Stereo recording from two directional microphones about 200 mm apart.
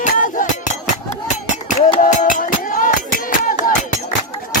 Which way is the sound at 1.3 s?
35° left (ahead or behind).